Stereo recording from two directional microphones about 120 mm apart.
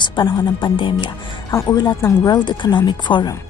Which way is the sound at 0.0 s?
35° left (ahead or behind).